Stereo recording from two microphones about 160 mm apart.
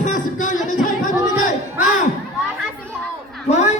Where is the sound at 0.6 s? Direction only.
55° left (ahead or behind).